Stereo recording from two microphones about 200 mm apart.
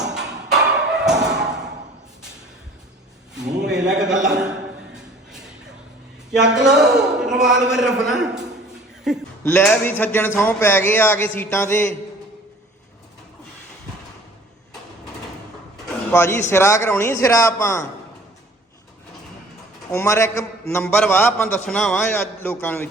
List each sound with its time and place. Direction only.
0.0 s a sound: 5° right (ahead or behind)
3.7 s a sound: 5° right (ahead or behind)
6.3 s a man's voice: 5° right (ahead or behind)
9.4 s a man's voice: 10° left (ahead or behind)
16.1 s a man's voice: 10° left (ahead or behind)
19.9 s a man's voice: 15° left (ahead or behind)